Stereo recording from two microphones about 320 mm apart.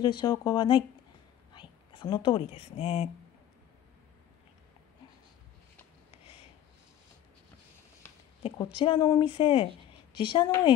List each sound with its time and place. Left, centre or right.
0.0 s speech: centre
8.0 s speech: centre